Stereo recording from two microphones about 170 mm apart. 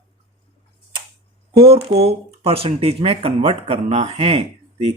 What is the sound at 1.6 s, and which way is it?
Speech, 35° right (ahead or behind).